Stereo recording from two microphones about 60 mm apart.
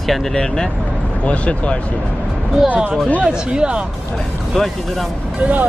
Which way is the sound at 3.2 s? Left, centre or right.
Centre.